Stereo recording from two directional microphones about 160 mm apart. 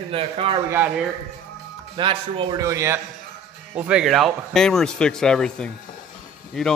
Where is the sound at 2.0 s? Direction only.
30° right (ahead or behind).